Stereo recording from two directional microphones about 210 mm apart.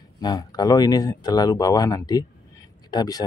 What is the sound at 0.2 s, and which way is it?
Speech, 20° left (ahead or behind).